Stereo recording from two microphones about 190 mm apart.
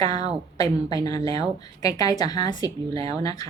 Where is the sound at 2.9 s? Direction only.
30° right (ahead or behind).